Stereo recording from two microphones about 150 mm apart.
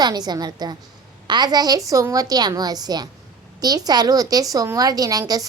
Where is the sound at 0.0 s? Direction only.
25° right (ahead or behind).